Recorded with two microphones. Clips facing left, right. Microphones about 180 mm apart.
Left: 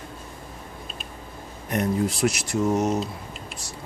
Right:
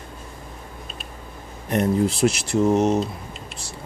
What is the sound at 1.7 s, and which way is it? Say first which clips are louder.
Speech: right 4 dB; 30° right (ahead or behind).